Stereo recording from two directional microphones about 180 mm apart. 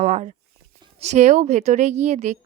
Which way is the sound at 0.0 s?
40° right (ahead or behind).